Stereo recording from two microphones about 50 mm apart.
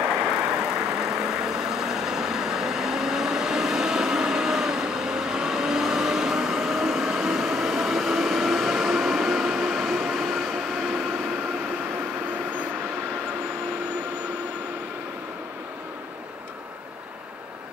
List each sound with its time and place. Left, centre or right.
0.0 s vehicle: right
1.2 s vehicle: centre